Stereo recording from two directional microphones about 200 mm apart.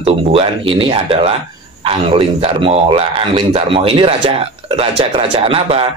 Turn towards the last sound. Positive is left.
turn(degrees=-30)  # may be behind; listen again after turning